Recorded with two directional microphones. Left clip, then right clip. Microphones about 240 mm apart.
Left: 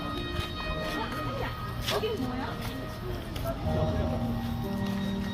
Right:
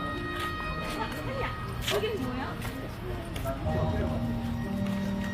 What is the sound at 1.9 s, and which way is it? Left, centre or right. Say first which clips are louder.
Music: right 1 dB; right.